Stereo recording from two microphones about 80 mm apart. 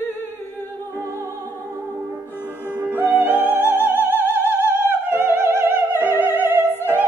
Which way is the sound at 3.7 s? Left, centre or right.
Right.